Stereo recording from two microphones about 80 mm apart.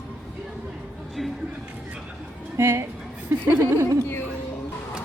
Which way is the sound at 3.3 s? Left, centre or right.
Right.